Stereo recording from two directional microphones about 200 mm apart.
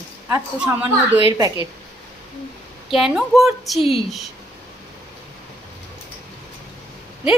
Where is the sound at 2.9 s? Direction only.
Centre (ahead or behind).